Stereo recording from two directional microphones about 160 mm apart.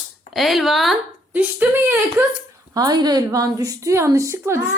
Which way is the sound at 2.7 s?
25° right (ahead or behind).